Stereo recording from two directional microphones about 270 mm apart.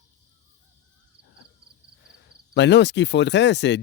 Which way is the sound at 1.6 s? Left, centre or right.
Right.